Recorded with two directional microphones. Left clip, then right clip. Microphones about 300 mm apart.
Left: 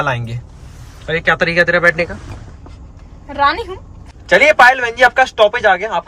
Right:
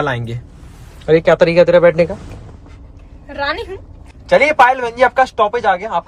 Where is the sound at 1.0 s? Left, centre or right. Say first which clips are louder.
Right 4 dB; right.